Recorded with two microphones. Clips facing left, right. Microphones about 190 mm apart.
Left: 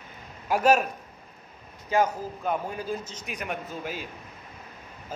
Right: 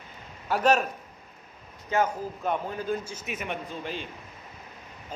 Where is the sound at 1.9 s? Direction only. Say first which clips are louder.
Left 2 dB; 10° left (ahead or behind).